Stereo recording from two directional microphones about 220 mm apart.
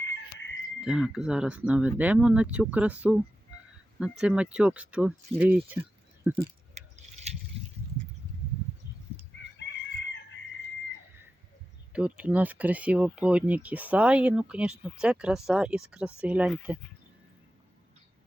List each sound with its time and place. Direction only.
0.1 s chicken: 55° left (ahead or behind)
0.8 s speech: 5° right (ahead or behind)
4.2 s speech: 5° right (ahead or behind)
6.7 s keys jangling: 30° right (ahead or behind)
9.6 s chicken: 55° left (ahead or behind)
11.9 s speech: 5° right (ahead or behind)